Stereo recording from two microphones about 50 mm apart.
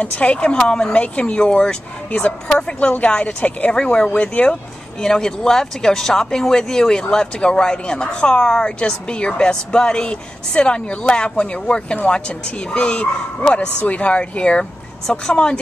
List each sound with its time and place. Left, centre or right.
0.0 s speech: left
3.7 s speech: centre
5.0 s speech: centre
14.6 s speech: centre